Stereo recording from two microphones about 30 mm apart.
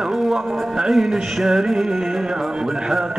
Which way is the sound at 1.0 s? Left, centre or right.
Centre.